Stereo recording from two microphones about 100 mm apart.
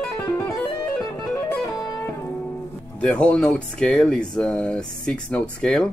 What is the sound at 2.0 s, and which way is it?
Music, 25° left (ahead or behind).